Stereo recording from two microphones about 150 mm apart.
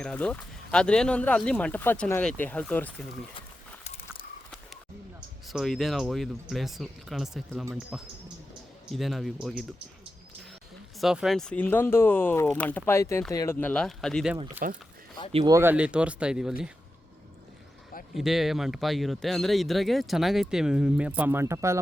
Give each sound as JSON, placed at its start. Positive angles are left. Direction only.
{"t": 0.0, "sound": "speech", "side_deg": 5}
{"t": 3.8, "sound": "a sound", "side_deg": 40}
{"t": 5.5, "sound": "speech", "side_deg": 0}
{"t": 11.0, "sound": "speech", "side_deg": -5}
{"t": 13.6, "sound": "speech", "side_deg": 10}
{"t": 14.6, "sound": "speech", "side_deg": -70}
{"t": 15.4, "sound": "speech", "side_deg": -20}
{"t": 15.7, "sound": "speech", "side_deg": -5}
{"t": 18.1, "sound": "speech", "side_deg": 0}